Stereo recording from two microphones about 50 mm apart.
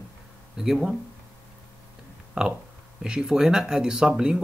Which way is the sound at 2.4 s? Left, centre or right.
Centre.